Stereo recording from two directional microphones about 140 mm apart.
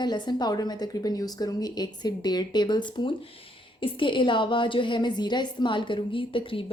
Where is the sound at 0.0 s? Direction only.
30° left (ahead or behind).